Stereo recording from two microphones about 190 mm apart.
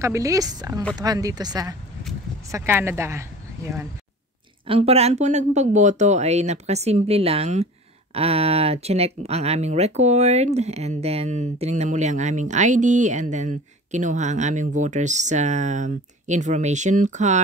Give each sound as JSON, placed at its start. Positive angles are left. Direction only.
{"t": 0.0, "sound": "speech", "side_deg": -15}
{"t": 4.6, "sound": "speech", "side_deg": -30}